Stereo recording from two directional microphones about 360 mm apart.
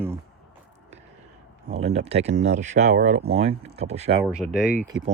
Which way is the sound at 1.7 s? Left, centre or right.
Centre.